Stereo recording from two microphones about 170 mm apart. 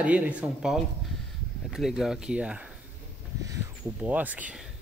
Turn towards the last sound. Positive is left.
turn(degrees=-10)  # may be behind; listen again after turning